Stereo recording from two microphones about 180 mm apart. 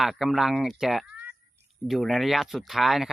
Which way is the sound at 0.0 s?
Centre (ahead or behind).